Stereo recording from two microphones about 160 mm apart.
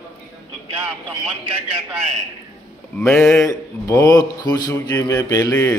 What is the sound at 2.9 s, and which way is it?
Speech, 15° left (ahead or behind).